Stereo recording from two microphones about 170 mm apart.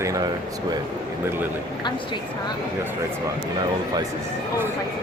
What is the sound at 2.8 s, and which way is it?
Speech, 15° right (ahead or behind).